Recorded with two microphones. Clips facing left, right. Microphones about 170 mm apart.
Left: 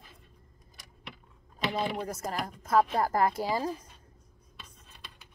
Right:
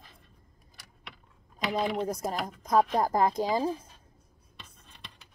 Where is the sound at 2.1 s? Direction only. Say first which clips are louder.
Right 2 dB; 15° right (ahead or behind).